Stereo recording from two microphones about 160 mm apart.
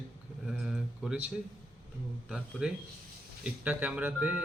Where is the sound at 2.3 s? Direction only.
5° right (ahead or behind).